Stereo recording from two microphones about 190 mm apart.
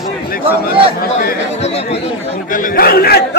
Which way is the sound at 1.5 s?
35° left (ahead or behind).